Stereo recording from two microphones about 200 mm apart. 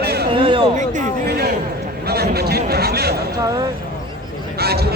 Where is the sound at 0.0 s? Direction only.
55° right (ahead or behind).